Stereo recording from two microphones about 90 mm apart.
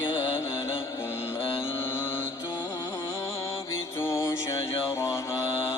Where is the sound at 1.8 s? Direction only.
25° left (ahead or behind).